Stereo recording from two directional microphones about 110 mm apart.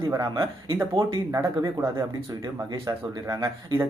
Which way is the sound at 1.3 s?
25° right (ahead or behind).